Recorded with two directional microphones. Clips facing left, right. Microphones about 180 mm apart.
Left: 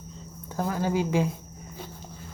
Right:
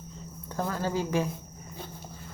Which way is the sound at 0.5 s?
15° left (ahead or behind).